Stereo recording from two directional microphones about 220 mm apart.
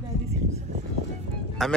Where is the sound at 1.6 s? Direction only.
Centre (ahead or behind).